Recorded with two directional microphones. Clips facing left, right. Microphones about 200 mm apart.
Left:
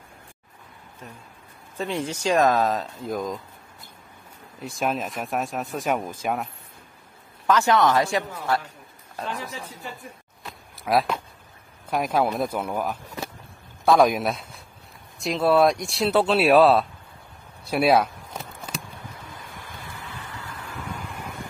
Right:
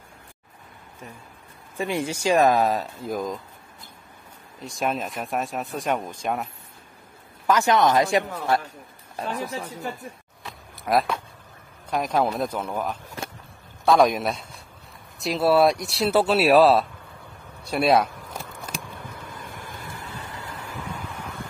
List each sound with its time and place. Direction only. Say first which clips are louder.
1.8 s speech: right 1 dB; 10° right (ahead or behind)
4.6 s speech: even; centre (ahead or behind)
7.4 s speech: even; 15° right (ahead or behind)
10.4 s a sound: even; centre (ahead or behind)
11.9 s a man's voice: even; 5° left (ahead or behind)
17.6 s a sound: even; centre (ahead or behind)
19.3 s vehicle: right 3 dB; 50° right (ahead or behind)